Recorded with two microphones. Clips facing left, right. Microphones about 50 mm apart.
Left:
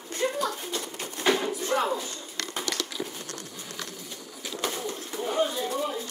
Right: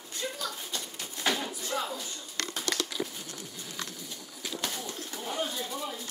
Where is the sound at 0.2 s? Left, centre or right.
Left.